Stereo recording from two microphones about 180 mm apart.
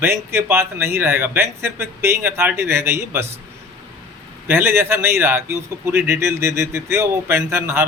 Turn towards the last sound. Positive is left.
turn(degrees=-15)  # may be behind; listen again after turning